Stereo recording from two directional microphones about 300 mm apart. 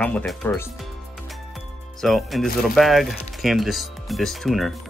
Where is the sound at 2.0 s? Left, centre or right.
Centre.